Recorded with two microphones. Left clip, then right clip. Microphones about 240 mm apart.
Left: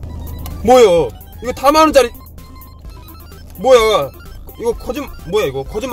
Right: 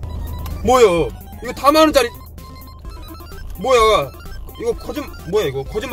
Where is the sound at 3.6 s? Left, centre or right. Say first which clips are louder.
Left 3 dB; left.